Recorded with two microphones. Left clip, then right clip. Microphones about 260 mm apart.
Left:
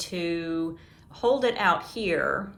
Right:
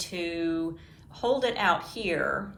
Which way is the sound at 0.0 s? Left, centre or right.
Left.